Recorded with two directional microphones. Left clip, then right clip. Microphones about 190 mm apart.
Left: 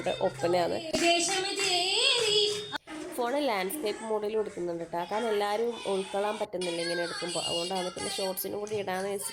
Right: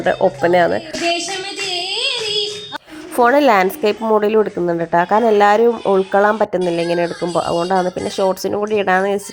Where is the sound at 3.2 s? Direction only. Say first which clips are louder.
Right 18 dB; 30° right (ahead or behind).